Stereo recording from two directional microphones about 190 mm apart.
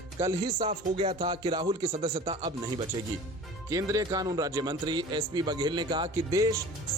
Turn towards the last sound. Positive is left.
turn(degrees=-15)  # may be behind; listen again after turning